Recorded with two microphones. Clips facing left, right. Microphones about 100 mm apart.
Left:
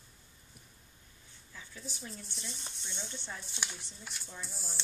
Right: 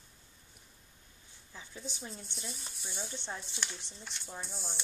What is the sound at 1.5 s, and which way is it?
Speech, 20° right (ahead or behind).